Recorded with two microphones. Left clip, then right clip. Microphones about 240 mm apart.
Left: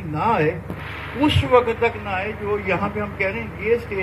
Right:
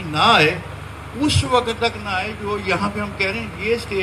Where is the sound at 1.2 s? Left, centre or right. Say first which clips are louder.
Left 2 dB; right.